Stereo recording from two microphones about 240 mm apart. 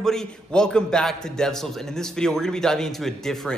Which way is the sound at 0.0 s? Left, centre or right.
Centre.